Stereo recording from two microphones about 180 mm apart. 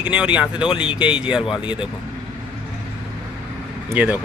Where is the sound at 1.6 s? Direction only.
25° left (ahead or behind).